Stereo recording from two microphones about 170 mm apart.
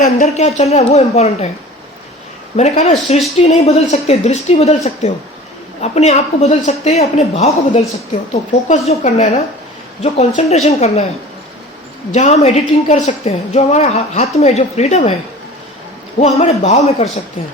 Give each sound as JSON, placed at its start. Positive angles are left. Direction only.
{"t": 0.0, "sound": "speech", "side_deg": 45}
{"t": 2.6, "sound": "speech", "side_deg": 40}
{"t": 12.1, "sound": "speech", "side_deg": 40}
{"t": 16.1, "sound": "speech", "side_deg": 40}